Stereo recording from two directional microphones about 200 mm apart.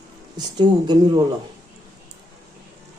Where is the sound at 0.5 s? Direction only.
20° right (ahead or behind).